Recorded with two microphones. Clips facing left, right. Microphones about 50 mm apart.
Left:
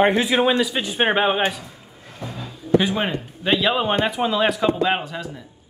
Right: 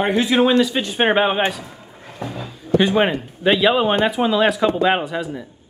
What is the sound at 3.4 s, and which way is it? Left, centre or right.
Speech, centre.